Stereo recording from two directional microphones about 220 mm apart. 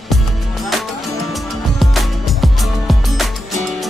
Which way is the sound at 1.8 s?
Centre (ahead or behind).